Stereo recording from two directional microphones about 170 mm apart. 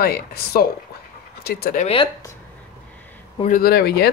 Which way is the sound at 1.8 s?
35° left (ahead or behind).